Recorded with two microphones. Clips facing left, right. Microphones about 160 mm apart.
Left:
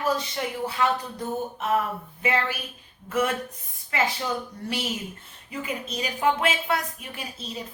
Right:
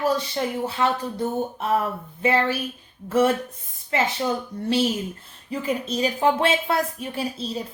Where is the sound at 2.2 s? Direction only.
30° right (ahead or behind).